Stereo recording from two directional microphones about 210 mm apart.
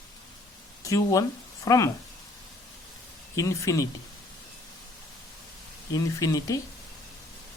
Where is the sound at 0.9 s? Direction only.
15° left (ahead or behind).